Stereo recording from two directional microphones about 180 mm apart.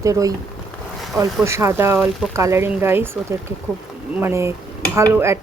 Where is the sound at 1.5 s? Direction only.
15° right (ahead or behind).